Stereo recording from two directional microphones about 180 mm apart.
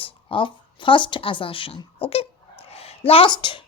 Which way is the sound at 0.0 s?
30° left (ahead or behind).